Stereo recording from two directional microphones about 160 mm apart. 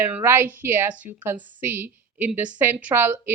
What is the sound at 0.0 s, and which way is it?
Speech, 15° right (ahead or behind).